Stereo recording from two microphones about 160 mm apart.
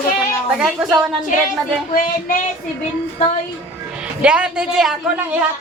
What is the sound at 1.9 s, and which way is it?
Child singing, 60° left (ahead or behind).